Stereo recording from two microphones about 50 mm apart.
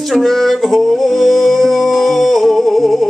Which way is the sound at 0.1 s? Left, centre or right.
Centre.